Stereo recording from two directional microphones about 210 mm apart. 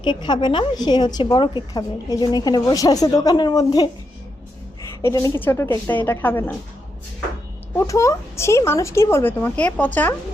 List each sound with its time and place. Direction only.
0.0 s a woman's voice: 20° left (ahead or behind)
7.8 s speech: 15° left (ahead or behind)